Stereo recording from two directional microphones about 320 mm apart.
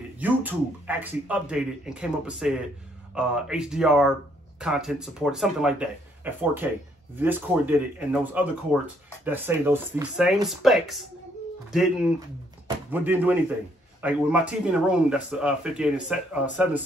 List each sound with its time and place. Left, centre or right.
0.2 s speech: centre
12.6 s speech: centre